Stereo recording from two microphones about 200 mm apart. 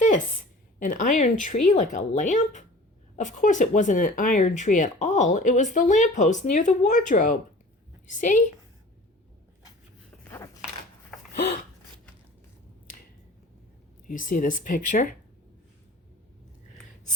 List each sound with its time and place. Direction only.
0.8 s speech: 40° left (ahead or behind)
10.2 s a sound: 15° left (ahead or behind)
14.1 s speech: 40° left (ahead or behind)